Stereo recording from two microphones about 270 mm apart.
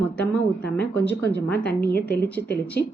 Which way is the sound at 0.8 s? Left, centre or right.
Left.